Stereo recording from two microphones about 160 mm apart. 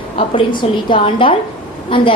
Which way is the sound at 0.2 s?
30° left (ahead or behind).